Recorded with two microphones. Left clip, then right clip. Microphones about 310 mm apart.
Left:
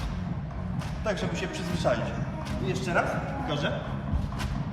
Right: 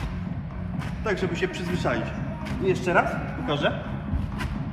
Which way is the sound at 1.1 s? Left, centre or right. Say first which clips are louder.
Right 6 dB; centre.